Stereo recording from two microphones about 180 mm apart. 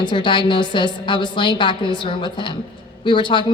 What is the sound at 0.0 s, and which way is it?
A woman's voice, 25° left (ahead or behind).